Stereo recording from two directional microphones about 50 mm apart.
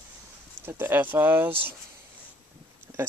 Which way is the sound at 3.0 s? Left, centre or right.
Right.